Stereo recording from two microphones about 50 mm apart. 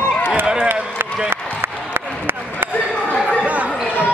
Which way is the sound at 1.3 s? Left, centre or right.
Right.